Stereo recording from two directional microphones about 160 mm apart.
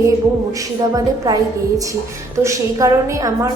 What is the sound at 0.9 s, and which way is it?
A woman's voice, 20° right (ahead or behind).